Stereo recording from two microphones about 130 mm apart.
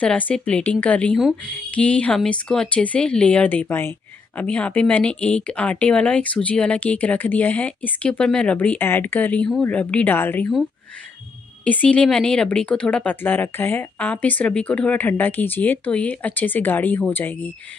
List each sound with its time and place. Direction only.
0.0 s speech: 10° left (ahead or behind)
11.6 s speech: 10° left (ahead or behind)